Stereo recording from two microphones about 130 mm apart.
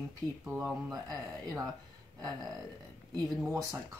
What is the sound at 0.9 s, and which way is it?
Speech, 30° right (ahead or behind).